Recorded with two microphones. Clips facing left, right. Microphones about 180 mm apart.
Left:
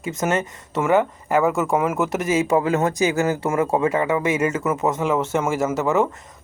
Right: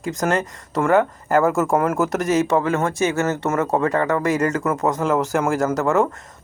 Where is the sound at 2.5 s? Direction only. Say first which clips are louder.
Left 1 dB; 15° left (ahead or behind).